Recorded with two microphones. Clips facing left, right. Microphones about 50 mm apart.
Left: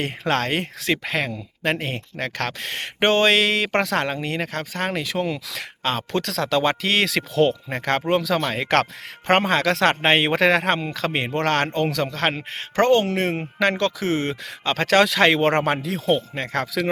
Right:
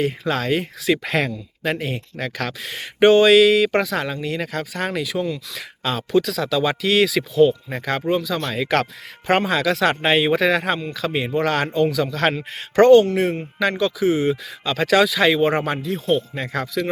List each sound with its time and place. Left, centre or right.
0.0 s speech: left
1.2 s speech: centre
1.7 s speech: left
4.1 s speech: left
5.2 s speech: left
5.8 s speech: left
8.4 s speech: left
12.1 s speech: left
13.6 s speech: left